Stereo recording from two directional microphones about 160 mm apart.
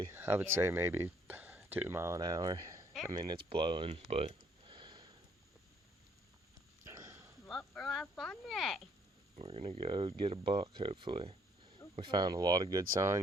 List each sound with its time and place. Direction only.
0.1 s speech: 10° right (ahead or behind); by 4.0 s 35° right (ahead or behind)
4.1 s a sound: 35° right (ahead or behind)
6.8 s a sound: 20° right (ahead or behind)
7.7 s insect: centre (ahead or behind)
8.0 s speech: 5° left (ahead or behind)
9.3 s speech: 35° right (ahead or behind); by 13.1 s 20° right (ahead or behind)